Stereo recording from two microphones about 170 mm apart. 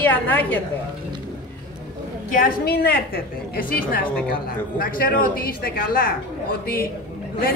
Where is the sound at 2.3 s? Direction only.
60° left (ahead or behind).